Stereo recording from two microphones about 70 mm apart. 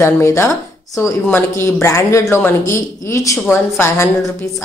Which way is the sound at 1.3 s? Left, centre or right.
Left.